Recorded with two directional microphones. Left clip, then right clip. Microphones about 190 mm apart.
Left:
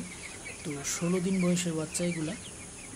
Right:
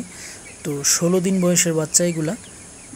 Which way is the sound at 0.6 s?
35° right (ahead or behind).